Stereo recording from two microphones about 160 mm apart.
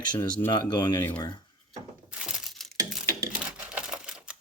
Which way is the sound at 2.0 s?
5° right (ahead or behind).